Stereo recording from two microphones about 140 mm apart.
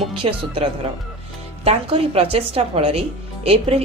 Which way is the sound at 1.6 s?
45° right (ahead or behind).